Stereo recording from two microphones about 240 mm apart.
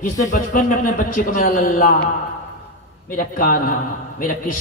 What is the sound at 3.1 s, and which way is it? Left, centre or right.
A man's voice, left.